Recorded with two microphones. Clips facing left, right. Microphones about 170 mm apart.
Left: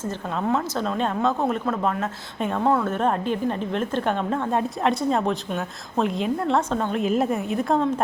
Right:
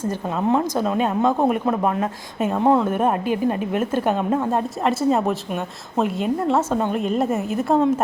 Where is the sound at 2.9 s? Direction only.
10° right (ahead or behind).